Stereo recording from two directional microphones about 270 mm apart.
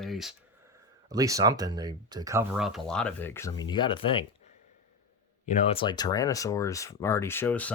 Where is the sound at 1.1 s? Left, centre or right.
Centre.